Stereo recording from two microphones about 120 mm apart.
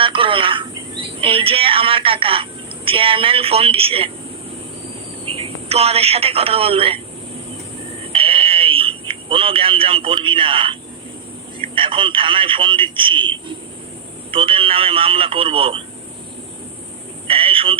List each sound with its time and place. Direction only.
0.0 s cricket: 45° right (ahead or behind)
1.2 s a woman's voice: 50° right (ahead or behind)
5.2 s speech: 50° right (ahead or behind)
8.0 s a sound: 50° right (ahead or behind)
11.6 s a woman's voice: 45° right (ahead or behind)
17.2 s a sound: 50° right (ahead or behind)